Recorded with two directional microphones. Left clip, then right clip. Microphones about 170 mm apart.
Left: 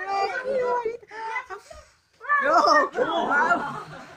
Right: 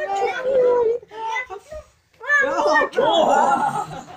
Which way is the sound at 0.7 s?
10° left (ahead or behind).